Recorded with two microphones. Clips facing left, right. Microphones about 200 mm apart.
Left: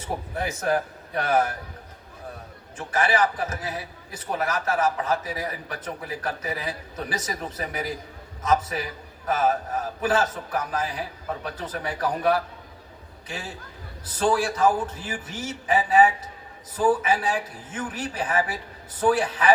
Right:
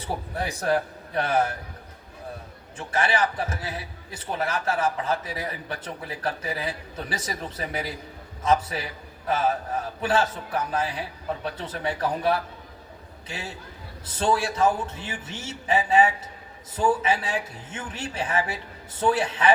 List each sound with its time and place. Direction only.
0.0 s a man's voice: 35° right (ahead or behind)
2.7 s a man's voice: 30° right (ahead or behind)
10.0 s a man's voice: 30° right (ahead or behind)
14.0 s a man's voice: 25° right (ahead or behind)